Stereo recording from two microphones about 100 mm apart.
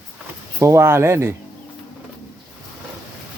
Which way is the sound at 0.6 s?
25° right (ahead or behind).